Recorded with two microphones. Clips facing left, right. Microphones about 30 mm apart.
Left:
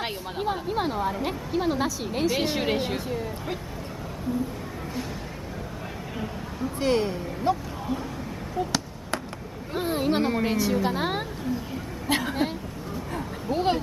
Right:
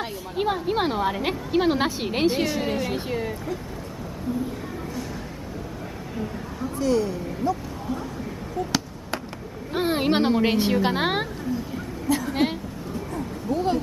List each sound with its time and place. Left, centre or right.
0.4 s a woman's voice: right
2.5 s a woman's voice: left
6.8 s speech: left
9.8 s a woman's voice: right
12.1 s a sound: left